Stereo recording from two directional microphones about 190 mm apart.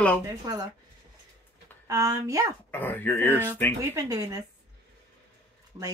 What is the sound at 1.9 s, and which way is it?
Speech, 15° right (ahead or behind).